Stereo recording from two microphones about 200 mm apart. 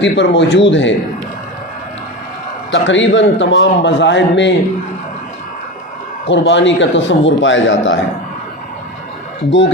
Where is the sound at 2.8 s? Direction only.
70° left (ahead or behind).